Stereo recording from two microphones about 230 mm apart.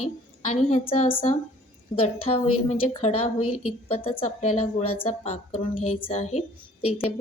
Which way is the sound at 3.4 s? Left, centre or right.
Left.